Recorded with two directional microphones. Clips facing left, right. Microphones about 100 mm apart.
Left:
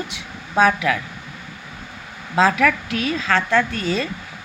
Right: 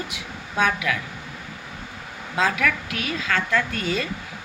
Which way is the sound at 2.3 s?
35° left (ahead or behind).